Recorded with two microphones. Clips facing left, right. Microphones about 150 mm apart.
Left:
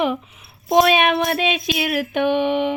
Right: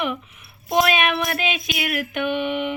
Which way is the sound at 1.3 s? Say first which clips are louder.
Left 5 dB; 30° left (ahead or behind).